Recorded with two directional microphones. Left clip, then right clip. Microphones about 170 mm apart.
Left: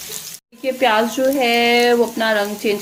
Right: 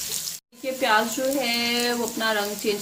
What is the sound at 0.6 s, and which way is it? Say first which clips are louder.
Frying: left 6 dB; 40° left (ahead or behind).